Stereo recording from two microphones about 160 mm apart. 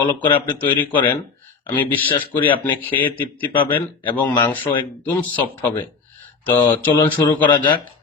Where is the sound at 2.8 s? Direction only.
10° left (ahead or behind).